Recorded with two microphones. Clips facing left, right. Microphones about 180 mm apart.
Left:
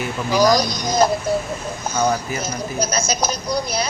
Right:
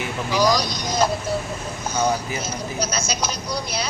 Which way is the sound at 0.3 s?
45° left (ahead or behind).